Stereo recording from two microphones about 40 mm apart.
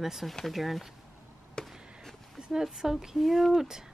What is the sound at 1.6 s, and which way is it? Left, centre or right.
Chop, centre.